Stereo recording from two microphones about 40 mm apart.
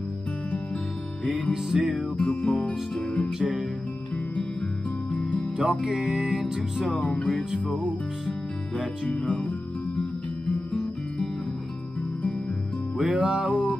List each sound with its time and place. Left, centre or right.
1.7 s music: centre
2.1 s music: left
5.1 s music: left
5.6 s music: right
6.1 s music: centre
7.0 s music: left
9.1 s music: left
12.9 s music: right